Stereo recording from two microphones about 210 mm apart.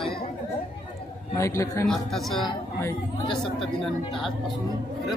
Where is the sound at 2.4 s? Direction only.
20° left (ahead or behind).